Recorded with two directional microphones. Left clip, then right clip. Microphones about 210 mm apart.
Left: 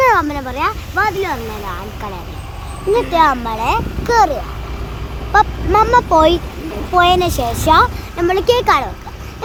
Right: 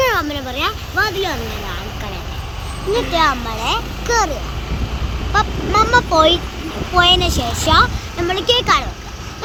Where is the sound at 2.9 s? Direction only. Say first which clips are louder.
Left 3 dB; 35° left (ahead or behind).